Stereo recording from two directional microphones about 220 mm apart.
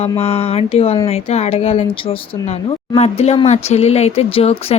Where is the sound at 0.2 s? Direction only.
25° left (ahead or behind).